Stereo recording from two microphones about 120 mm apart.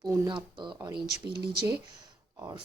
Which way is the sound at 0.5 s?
40° right (ahead or behind).